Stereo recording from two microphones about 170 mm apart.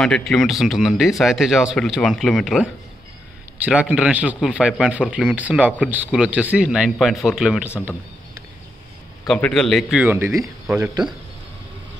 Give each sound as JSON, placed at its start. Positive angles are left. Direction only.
{"t": 0.0, "sound": "speech", "side_deg": 0}
{"t": 3.8, "sound": "speech", "side_deg": -5}
{"t": 9.3, "sound": "speech", "side_deg": 5}
{"t": 10.0, "sound": "speech", "side_deg": -15}